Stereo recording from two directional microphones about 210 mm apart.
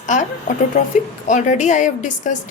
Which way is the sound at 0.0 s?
35° left (ahead or behind).